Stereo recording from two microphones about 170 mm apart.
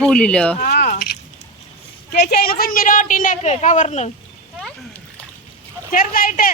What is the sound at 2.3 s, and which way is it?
Speech, 60° left (ahead or behind).